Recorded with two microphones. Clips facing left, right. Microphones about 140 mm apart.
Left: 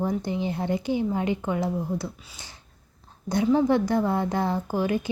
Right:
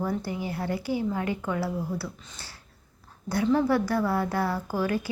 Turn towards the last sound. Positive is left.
turn(degrees=20)  # may be behind; listen again after turning